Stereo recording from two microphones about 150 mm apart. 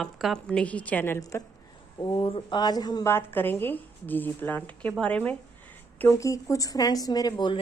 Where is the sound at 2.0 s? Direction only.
30° left (ahead or behind).